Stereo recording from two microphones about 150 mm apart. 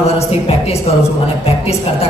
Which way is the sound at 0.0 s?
45° left (ahead or behind).